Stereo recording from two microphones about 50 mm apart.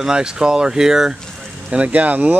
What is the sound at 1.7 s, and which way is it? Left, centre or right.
Speech, right.